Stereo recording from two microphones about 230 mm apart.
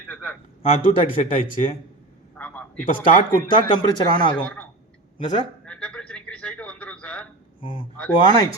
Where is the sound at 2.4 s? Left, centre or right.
Centre.